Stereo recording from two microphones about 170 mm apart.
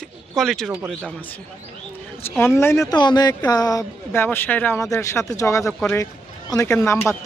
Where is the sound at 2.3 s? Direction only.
15° left (ahead or behind).